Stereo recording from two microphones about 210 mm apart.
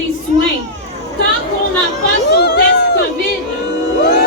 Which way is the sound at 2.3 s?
50° left (ahead or behind).